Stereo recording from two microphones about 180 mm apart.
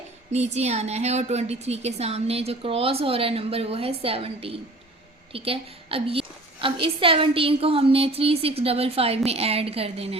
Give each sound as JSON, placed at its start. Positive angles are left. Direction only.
{"t": 0.3, "sound": "a woman's voice", "side_deg": -40}